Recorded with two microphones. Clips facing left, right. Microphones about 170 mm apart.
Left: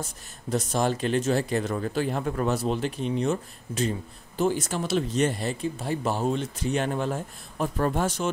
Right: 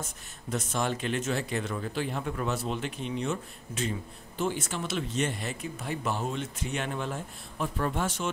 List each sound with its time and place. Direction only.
0.0 s speech: 35° left (ahead or behind)